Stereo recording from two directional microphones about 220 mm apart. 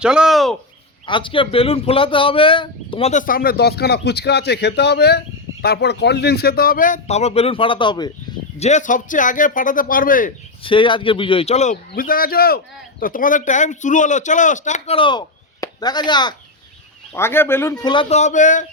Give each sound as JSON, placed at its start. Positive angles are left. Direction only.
{"t": 0.0, "sound": "a sound", "side_deg": -5}
{"t": 1.0, "sound": "speech", "side_deg": 20}
{"t": 8.5, "sound": "speech", "side_deg": 30}
{"t": 10.6, "sound": "a man's voice", "side_deg": 25}
{"t": 15.6, "sound": "chop", "side_deg": 20}
{"t": 17.1, "sound": "speech", "side_deg": 10}